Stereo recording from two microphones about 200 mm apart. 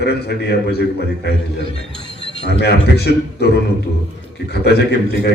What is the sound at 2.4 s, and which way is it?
A man's voice, 55° left (ahead or behind).